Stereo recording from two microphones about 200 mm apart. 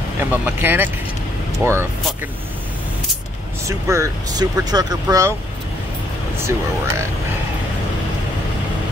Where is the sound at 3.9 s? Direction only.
15° right (ahead or behind).